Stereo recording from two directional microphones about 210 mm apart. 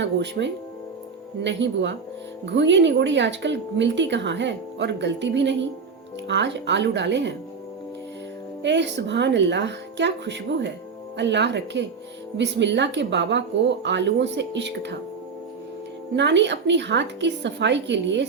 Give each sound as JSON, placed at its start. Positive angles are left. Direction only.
{"t": 0.0, "sound": "a woman's voice", "side_deg": -55}
{"t": 8.6, "sound": "a woman's voice", "side_deg": -55}
{"t": 16.1, "sound": "a woman's voice", "side_deg": -60}